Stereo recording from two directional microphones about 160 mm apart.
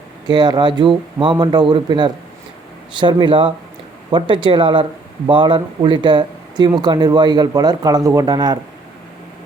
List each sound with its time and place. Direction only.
0.3 s speech: 25° right (ahead or behind)